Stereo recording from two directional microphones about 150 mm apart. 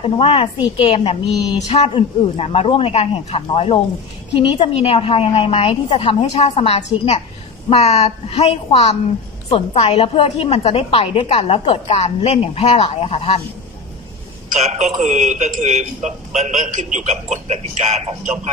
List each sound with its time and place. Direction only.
0.0 s a woman's voice: 40° left (ahead or behind)
14.5 s a man's voice: 50° right (ahead or behind)